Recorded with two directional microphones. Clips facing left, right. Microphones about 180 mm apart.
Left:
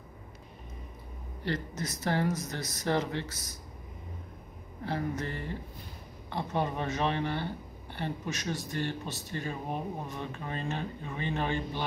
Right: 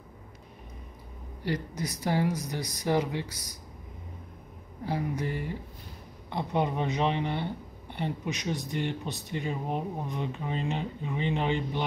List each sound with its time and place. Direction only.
1.4 s speech: 10° right (ahead or behind)
4.8 s speech: 10° right (ahead or behind)